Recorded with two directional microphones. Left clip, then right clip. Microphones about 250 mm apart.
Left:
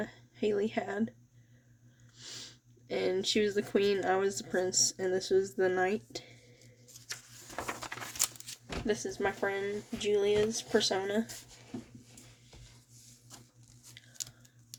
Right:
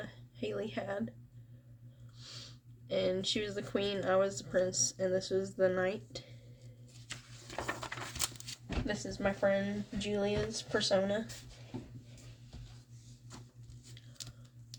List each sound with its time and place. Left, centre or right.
0.0 s speech: left
2.1 s speech: left
7.1 s a sound: centre
8.9 s speech: left